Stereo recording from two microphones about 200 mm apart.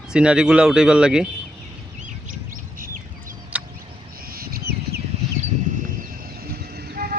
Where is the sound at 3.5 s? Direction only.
5° right (ahead or behind).